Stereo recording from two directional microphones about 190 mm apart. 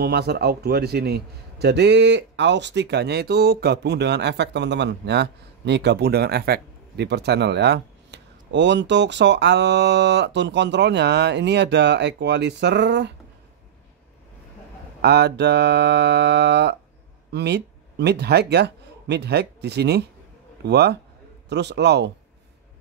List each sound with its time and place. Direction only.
0.0 s a man's voice: 60° right (ahead or behind)
15.0 s a man's voice: 60° right (ahead or behind)